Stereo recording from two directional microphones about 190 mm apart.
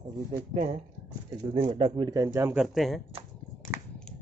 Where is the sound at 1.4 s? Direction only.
25° right (ahead or behind).